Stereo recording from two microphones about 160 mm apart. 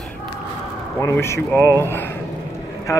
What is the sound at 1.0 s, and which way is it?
A man's voice, 15° left (ahead or behind).